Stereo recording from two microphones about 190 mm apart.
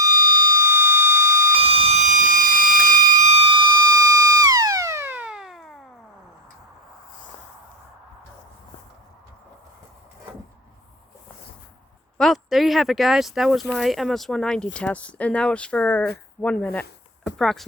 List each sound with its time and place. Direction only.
0.0 s siren: 20° right (ahead or behind)
1.6 s siren: 30° right (ahead or behind); by 5.8 s centre (ahead or behind)
12.1 s speech: centre (ahead or behind)
17.2 s a sound: 5° left (ahead or behind)